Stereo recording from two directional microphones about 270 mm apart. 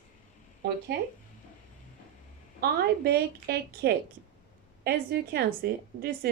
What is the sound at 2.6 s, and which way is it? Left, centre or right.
A woman's voice, right.